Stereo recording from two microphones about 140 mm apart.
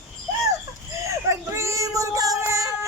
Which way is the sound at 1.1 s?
20° right (ahead or behind).